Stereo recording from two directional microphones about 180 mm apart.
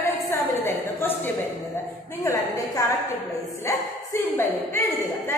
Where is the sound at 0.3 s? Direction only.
10° left (ahead or behind).